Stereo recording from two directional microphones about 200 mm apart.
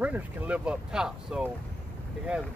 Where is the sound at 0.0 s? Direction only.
5° right (ahead or behind).